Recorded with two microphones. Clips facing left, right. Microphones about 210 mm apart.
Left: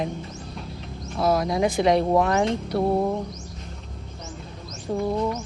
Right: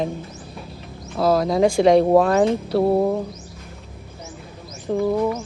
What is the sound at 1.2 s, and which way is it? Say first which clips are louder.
Speech: right 4 dB; 30° right (ahead or behind).